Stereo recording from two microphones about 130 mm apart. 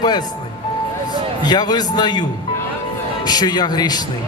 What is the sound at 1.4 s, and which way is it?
Speech, 30° left (ahead or behind).